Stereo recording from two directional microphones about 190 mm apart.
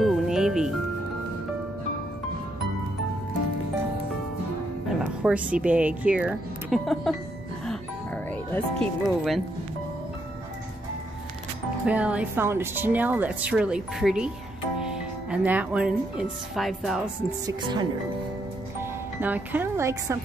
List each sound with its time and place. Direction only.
0.0 s music: centre (ahead or behind)
5.0 s speech: 5° right (ahead or behind)
7.6 s music: 5° left (ahead or behind)
11.8 s speech: 5° right (ahead or behind)
17.5 s speech: 25° right (ahead or behind)
18.8 s speech: 10° right (ahead or behind)